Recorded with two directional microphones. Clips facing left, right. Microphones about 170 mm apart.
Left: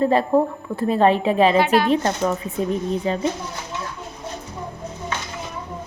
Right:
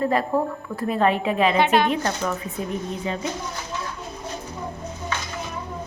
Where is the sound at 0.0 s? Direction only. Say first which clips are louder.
Left 4 dB; 30° left (ahead or behind).